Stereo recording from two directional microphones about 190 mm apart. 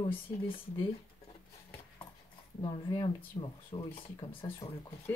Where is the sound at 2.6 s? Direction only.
25° left (ahead or behind).